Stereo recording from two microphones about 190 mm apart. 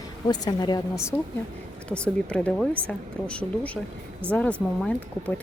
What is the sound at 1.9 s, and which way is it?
Speech, 5° left (ahead or behind).